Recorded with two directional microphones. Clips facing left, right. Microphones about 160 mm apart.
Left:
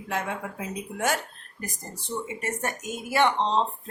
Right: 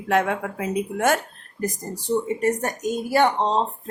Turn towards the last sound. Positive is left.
turn(degrees=-40)  # may be behind; listen again after turning